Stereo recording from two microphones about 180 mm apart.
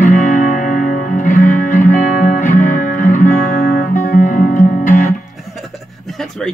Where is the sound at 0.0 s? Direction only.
45° left (ahead or behind).